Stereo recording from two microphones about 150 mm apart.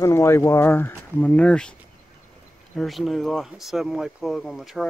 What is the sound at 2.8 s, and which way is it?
Speech, centre (ahead or behind).